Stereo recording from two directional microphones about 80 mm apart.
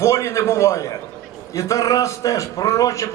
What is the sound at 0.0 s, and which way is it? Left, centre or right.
A man's voice, left.